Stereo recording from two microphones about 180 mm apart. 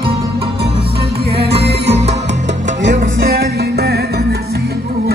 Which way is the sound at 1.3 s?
65° right (ahead or behind).